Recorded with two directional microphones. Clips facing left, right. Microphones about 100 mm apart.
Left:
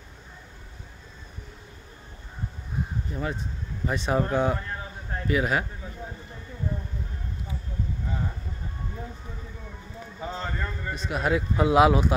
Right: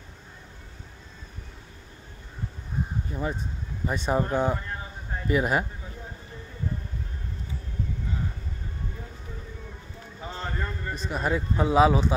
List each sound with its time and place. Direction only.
3.1 s speech: 15° right (ahead or behind)
3.8 s speech: centre (ahead or behind)
10.4 s a man's voice: centre (ahead or behind)